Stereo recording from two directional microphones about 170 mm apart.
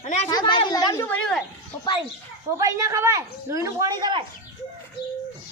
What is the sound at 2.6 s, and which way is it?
Speech, 20° right (ahead or behind).